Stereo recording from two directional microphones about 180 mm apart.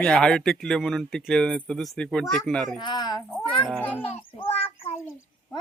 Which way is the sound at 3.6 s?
5° left (ahead or behind).